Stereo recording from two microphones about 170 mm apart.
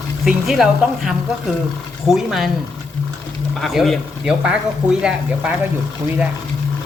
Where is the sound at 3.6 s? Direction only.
Centre (ahead or behind).